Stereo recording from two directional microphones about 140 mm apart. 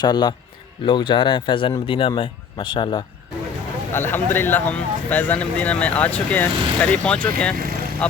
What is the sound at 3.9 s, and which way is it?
Speech, 15° left (ahead or behind).